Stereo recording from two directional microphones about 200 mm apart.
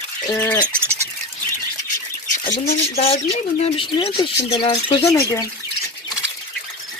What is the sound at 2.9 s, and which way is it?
Speech, 30° left (ahead or behind).